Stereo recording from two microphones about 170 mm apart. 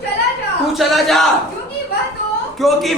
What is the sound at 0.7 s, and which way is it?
Speech, centre (ahead or behind).